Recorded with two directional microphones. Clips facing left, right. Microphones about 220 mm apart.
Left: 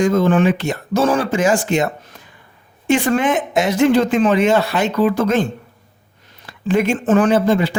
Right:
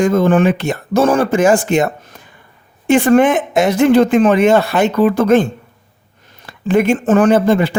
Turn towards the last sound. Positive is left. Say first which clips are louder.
# right 3 dB
turn(degrees=-55)  # may be behind; listen again after turning